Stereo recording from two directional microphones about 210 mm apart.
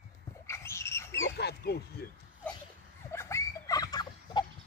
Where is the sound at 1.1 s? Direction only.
60° left (ahead or behind).